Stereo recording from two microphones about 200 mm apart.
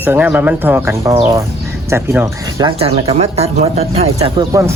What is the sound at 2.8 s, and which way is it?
Speech, 30° right (ahead or behind).